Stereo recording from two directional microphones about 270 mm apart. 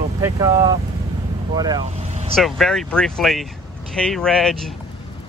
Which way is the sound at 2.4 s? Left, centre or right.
Centre.